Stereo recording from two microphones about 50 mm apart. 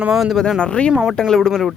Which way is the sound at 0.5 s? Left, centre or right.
Centre.